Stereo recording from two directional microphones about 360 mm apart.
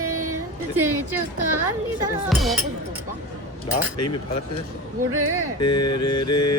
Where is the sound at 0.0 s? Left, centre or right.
Right.